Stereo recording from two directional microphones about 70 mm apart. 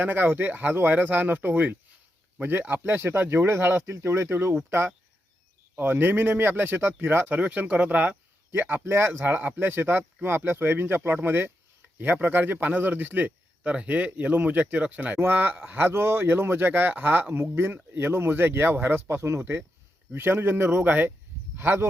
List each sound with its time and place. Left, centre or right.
0.0 s speech: right
5.7 s speech: right
7.3 s speech: right
9.2 s speech: right